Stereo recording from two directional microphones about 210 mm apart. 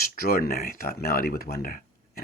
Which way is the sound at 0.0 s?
45° left (ahead or behind).